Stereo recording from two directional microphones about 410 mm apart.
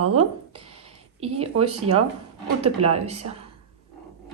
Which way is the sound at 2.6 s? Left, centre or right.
Centre.